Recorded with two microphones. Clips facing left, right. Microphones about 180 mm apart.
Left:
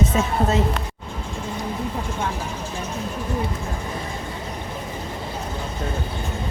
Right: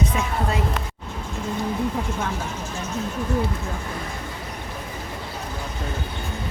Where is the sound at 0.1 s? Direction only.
25° left (ahead or behind).